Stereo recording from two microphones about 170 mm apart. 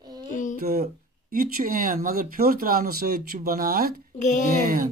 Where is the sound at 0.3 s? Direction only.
50° left (ahead or behind).